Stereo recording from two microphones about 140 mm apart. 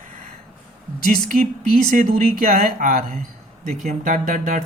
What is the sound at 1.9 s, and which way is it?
Speech, 75° right (ahead or behind).